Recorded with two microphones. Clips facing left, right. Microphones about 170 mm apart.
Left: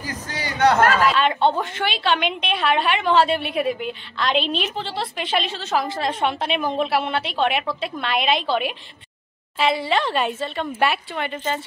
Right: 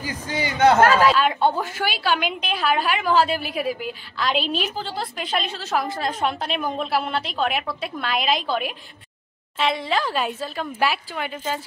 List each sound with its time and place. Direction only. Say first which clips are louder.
0.4 s a man's voice: right 2 dB; 25° right (ahead or behind)
1.1 s a woman's voice: left 1 dB; 5° right (ahead or behind)